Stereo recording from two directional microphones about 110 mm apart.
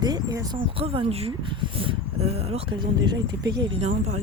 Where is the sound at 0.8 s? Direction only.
60° right (ahead or behind).